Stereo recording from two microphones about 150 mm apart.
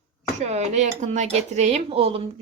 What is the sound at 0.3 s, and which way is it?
Speech, 50° right (ahead or behind).